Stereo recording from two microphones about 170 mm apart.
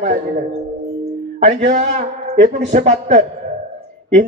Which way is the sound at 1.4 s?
55° right (ahead or behind).